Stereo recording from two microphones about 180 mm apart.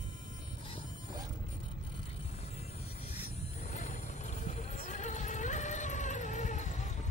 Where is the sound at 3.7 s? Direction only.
40° left (ahead or behind).